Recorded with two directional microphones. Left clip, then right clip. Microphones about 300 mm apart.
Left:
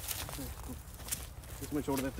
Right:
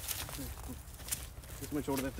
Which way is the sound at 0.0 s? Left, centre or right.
Centre.